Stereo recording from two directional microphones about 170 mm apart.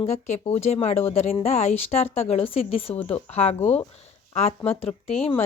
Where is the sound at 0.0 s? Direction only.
40° left (ahead or behind).